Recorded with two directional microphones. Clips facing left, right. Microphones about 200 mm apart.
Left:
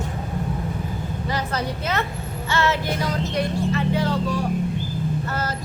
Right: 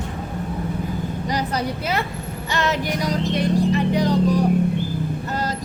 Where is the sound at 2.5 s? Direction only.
15° right (ahead or behind).